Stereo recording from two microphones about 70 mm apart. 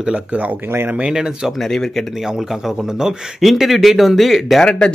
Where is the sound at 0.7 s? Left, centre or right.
Right.